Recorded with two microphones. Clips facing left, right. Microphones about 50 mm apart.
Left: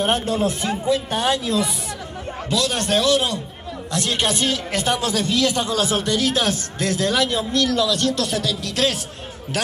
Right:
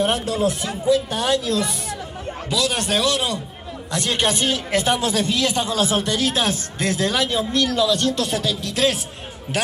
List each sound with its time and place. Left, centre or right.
0.0 s speech: left
2.5 s a man's voice: centre
4.5 s speech: right